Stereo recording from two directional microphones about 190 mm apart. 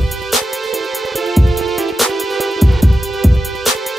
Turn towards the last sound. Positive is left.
turn(degrees=0)  # may be behind; listen again after turning